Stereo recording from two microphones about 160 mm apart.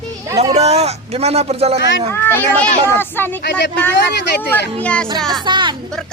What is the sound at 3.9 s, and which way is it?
Speech, 90° left.